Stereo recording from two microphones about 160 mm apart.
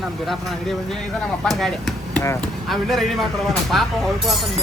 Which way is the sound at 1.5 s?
Centre (ahead or behind).